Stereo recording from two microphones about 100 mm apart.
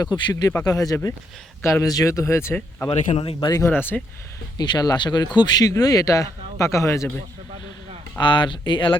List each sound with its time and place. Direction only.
0.0 s speech: 45° left (ahead or behind); by 2.6 s 25° left (ahead or behind)
2.6 s speech: 15° left (ahead or behind)
3.2 s speech: 60° left (ahead or behind)
3.7 s speech: 20° left (ahead or behind)
4.5 s speech: 45° left (ahead or behind)
8.2 s speech: 50° left (ahead or behind)